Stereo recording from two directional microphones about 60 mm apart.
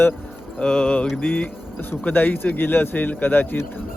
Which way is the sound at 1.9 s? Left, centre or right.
Left.